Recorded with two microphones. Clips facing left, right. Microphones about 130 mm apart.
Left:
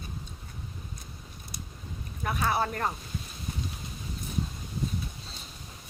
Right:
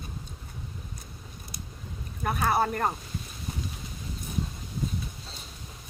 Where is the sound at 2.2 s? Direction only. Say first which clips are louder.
Right 3 dB; 45° right (ahead or behind).